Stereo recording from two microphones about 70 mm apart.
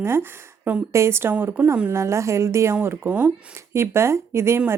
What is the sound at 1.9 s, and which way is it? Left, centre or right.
Speech, right.